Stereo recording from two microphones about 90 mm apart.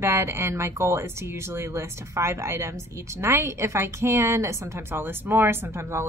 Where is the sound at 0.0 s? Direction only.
30° right (ahead or behind).